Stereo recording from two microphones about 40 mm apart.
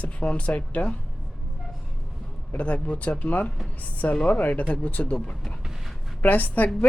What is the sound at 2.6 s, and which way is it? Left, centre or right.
A woman's voice, left.